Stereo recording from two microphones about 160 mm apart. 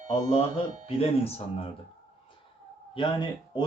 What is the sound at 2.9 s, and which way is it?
Speech, 30° left (ahead or behind).